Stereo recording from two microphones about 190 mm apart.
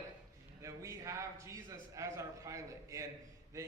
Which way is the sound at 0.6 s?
15° right (ahead or behind).